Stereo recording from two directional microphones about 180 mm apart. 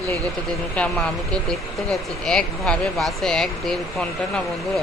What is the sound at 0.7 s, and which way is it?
Speech, 5° left (ahead or behind).